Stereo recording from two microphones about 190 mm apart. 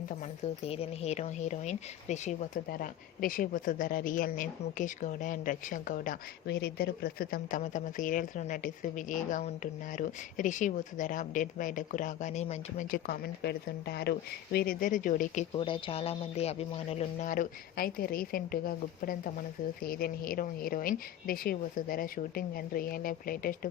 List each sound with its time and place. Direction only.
0.6 s speech: 30° left (ahead or behind)
2.6 s a woman's voice: 50° left (ahead or behind)
13.1 s speech: 60° left (ahead or behind)
15.5 s a woman's voice: 25° left (ahead or behind); by 23.6 s 50° left (ahead or behind)